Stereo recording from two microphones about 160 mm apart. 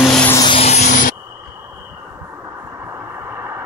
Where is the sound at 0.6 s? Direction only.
40° left (ahead or behind).